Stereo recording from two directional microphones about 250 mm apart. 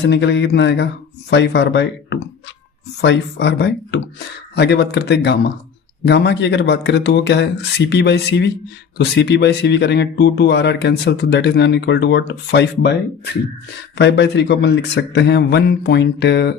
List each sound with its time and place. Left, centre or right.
0.0 s speech: left
13.9 s speech: left